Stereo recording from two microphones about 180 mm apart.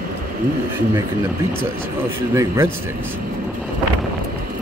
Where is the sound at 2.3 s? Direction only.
15° right (ahead or behind).